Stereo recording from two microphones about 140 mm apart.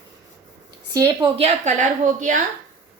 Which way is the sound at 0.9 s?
25° right (ahead or behind).